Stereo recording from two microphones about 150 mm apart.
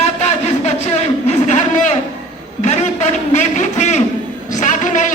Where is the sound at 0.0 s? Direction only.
50° left (ahead or behind).